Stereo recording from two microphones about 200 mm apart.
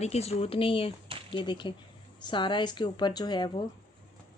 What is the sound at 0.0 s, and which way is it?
Speech, 30° left (ahead or behind).